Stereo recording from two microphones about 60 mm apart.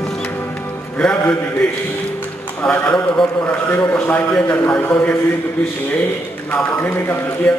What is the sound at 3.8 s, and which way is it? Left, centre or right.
A man's voice, left.